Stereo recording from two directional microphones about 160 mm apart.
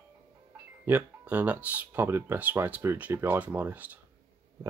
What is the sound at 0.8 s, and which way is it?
Speech, 10° right (ahead or behind).